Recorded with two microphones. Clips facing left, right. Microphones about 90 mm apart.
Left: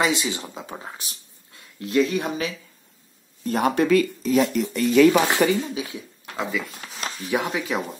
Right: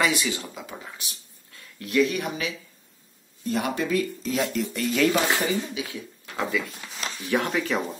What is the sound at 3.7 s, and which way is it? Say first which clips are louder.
Speech: left 10 dB; 75° left (ahead or behind).